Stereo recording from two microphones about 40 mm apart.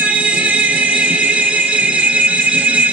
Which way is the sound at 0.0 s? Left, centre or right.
Right.